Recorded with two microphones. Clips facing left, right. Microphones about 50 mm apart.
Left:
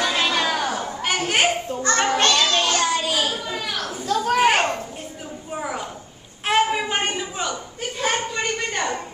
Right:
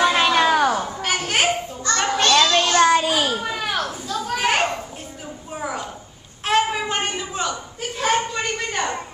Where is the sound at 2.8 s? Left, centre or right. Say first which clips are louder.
Right 5 dB; right.